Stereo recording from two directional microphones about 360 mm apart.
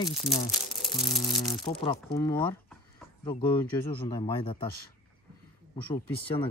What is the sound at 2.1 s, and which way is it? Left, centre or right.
Speech, centre.